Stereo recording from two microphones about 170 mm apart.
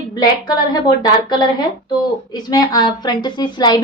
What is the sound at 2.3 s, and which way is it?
A woman's voice, 25° left (ahead or behind).